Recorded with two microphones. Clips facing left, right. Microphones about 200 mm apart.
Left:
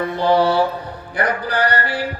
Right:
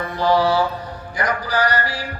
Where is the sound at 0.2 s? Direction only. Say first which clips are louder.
Left 1 dB; 60° left (ahead or behind).